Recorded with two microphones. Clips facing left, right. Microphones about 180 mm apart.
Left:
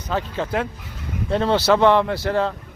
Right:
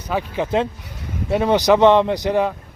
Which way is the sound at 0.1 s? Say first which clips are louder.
Right 3 dB; 15° right (ahead or behind).